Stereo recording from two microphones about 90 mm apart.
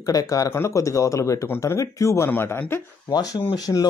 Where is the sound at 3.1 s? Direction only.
45° left (ahead or behind).